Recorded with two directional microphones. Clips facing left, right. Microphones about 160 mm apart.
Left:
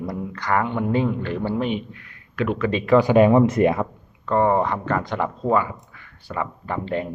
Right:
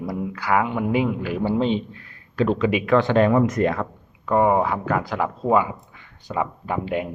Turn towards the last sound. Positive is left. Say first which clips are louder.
# right 1 dB
turn(degrees=-10)  # may be behind; listen again after turning